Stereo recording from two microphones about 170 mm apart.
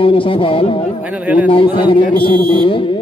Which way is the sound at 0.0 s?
30° left (ahead or behind).